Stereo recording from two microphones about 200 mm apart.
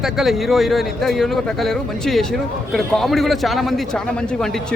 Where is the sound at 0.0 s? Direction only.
Centre (ahead or behind).